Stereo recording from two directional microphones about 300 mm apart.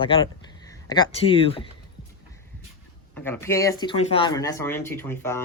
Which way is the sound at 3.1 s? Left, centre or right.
Centre.